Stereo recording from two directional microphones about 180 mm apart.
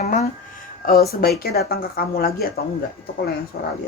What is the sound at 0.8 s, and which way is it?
Speech, 55° left (ahead or behind).